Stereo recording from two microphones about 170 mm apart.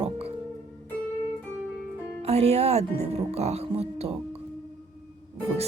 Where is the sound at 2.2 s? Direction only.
40° right (ahead or behind).